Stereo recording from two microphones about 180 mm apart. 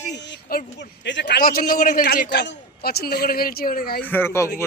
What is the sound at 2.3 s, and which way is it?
Speech, 70° left (ahead or behind).